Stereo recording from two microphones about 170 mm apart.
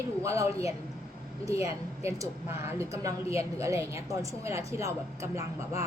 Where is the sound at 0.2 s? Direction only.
20° right (ahead or behind).